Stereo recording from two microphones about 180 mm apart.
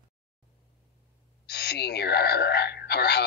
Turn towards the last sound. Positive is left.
turn(degrees=65)  # may be behind; listen again after turning